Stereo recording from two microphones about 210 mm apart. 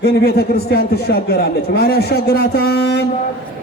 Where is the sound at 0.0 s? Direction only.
50° left (ahead or behind).